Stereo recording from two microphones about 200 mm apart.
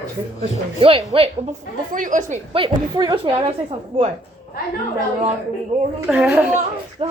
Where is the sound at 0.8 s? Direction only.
30° right (ahead or behind).